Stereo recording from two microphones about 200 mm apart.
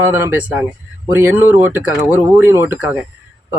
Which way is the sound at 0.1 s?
10° right (ahead or behind).